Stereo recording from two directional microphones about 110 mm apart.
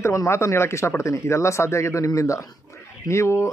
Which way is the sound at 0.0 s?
25° left (ahead or behind).